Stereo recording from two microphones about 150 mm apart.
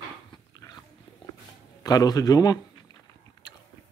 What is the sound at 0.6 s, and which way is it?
Dog, 25° left (ahead or behind).